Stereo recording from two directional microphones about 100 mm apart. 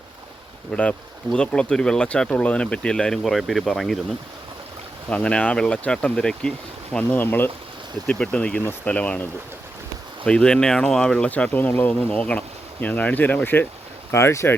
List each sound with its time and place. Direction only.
0.7 s speech: 10° left (ahead or behind)
5.0 s speech: 10° left (ahead or behind)
10.2 s speech: 10° left (ahead or behind); by 14.5 s 25° left (ahead or behind)